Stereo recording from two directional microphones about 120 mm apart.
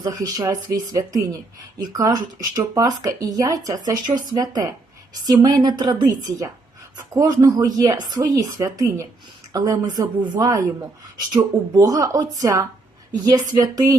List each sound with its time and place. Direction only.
0.0 s speech: 30° right (ahead or behind)